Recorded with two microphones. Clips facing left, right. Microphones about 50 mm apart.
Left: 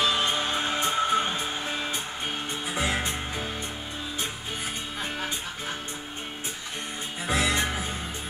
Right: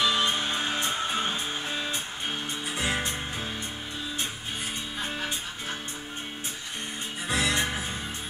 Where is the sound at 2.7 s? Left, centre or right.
Left.